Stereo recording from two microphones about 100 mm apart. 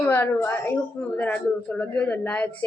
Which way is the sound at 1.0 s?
15° left (ahead or behind).